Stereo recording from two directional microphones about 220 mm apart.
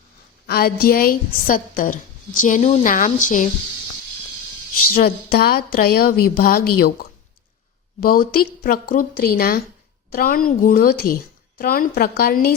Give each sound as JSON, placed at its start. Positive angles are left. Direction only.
{"t": 0.4, "sound": "a woman's voice", "side_deg": 45}
{"t": 4.9, "sound": "a woman's voice", "side_deg": 45}